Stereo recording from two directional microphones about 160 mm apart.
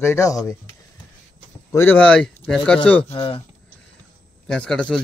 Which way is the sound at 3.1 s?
35° left (ahead or behind).